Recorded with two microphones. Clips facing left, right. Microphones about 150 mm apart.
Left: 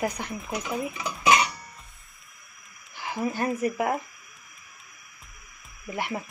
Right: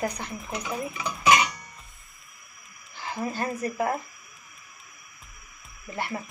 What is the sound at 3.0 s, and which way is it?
Speech, 15° left (ahead or behind).